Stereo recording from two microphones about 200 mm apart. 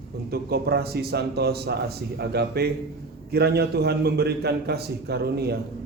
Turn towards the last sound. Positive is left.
turn(degrees=-55)  # may be behind; listen again after turning